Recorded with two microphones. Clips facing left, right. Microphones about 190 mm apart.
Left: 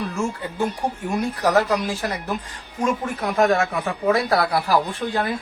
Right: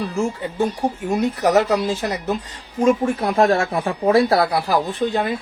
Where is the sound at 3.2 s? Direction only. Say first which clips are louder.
Right 2 dB; 30° right (ahead or behind).